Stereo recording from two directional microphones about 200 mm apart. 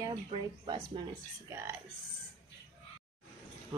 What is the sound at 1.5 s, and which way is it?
Speech, 10° right (ahead or behind).